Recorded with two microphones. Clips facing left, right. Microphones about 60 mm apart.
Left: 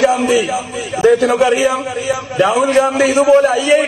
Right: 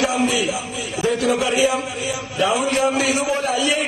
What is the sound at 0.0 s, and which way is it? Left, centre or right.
Speech, left.